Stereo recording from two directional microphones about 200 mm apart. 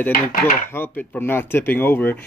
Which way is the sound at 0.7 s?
10° left (ahead or behind).